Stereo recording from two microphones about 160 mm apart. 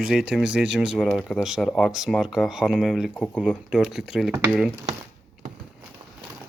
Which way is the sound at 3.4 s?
5° right (ahead or behind).